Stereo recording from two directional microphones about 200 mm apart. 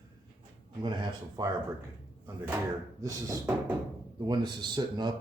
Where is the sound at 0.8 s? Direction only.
20° right (ahead or behind).